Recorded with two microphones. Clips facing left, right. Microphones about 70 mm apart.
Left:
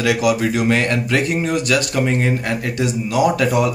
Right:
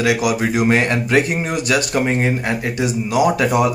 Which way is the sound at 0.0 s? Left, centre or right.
Centre.